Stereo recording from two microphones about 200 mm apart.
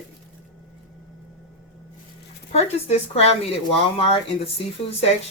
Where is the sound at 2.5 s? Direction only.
30° left (ahead or behind).